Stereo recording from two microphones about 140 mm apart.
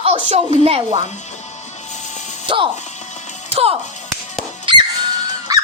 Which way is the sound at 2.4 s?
35° right (ahead or behind).